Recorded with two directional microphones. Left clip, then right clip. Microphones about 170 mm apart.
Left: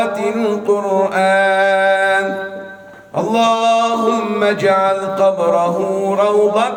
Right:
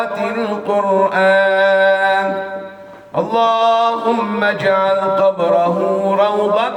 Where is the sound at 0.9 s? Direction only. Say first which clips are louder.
Right 2 dB; 45° left (ahead or behind).